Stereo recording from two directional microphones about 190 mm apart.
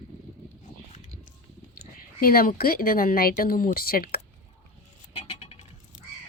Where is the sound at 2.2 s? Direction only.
50° left (ahead or behind).